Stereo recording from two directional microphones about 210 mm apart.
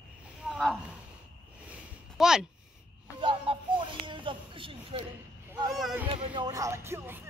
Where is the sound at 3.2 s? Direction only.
25° right (ahead or behind).